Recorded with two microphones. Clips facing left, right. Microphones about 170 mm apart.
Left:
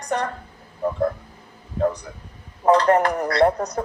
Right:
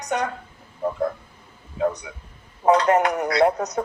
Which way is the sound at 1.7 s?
30° left (ahead or behind).